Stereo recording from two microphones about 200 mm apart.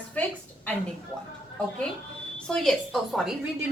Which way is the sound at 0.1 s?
10° left (ahead or behind).